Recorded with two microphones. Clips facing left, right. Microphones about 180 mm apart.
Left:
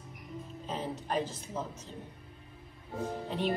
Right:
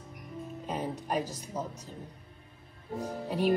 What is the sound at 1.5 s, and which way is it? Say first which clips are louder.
Speech: right 2 dB; 10° right (ahead or behind).